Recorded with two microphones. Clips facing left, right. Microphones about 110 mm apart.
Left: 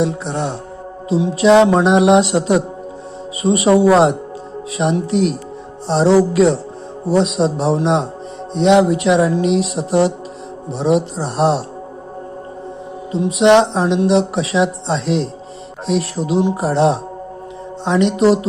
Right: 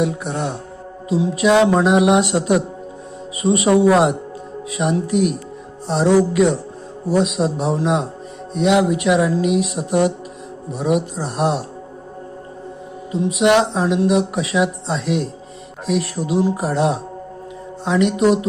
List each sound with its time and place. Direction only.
0.0 s music: 25° left (ahead or behind)
13.1 s music: 30° left (ahead or behind)